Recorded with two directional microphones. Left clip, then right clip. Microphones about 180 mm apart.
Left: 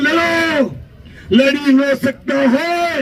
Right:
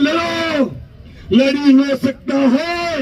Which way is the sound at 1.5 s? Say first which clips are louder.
Even; 20° left (ahead or behind).